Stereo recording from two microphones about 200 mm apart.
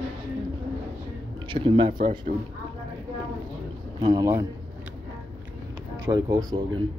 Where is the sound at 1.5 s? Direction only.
25° right (ahead or behind).